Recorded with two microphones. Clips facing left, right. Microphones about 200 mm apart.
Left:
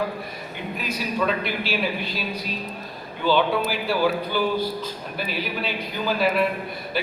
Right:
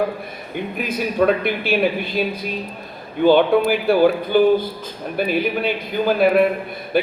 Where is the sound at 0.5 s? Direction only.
55° right (ahead or behind).